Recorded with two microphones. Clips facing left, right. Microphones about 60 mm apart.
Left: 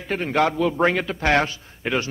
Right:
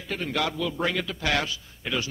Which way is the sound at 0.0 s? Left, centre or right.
Left.